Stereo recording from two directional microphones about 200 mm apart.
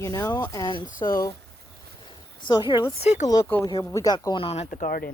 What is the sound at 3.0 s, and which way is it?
Speech, 35° left (ahead or behind).